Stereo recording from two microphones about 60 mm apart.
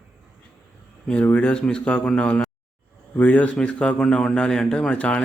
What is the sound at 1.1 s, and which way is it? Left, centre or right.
A man's voice, left.